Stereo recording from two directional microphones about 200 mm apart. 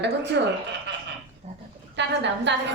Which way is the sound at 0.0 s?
60° right (ahead or behind).